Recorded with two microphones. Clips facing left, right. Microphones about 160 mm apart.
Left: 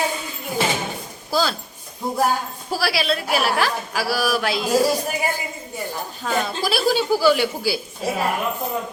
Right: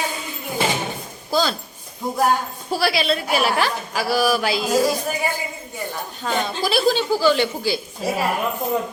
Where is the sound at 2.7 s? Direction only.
Centre (ahead or behind).